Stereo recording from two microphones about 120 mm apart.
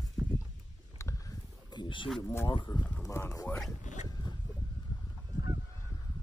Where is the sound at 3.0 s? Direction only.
25° left (ahead or behind).